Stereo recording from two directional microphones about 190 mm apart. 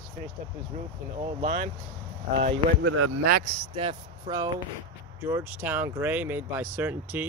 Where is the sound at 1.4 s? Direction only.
45° right (ahead or behind).